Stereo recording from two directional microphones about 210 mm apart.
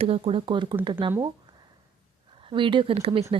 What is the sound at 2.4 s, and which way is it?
Speech, 25° right (ahead or behind).